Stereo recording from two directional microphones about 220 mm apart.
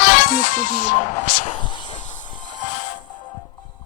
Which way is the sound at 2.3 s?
35° left (ahead or behind).